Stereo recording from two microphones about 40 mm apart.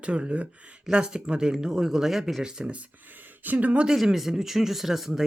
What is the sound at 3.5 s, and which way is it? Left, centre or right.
Speech, right.